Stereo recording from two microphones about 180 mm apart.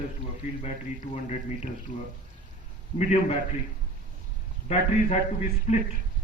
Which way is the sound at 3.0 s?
40° left (ahead or behind).